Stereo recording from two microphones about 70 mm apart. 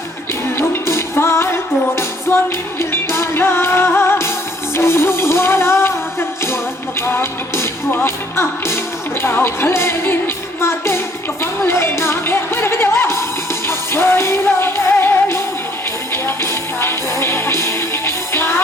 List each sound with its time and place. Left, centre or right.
0.5 s music: left